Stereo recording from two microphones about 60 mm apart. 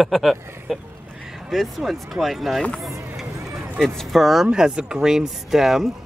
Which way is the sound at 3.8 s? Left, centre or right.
Centre.